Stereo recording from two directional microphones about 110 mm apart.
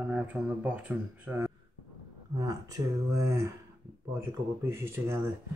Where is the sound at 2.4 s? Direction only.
35° right (ahead or behind).